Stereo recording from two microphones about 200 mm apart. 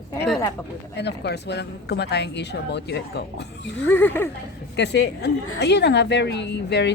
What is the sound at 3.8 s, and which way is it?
Speech, 10° left (ahead or behind).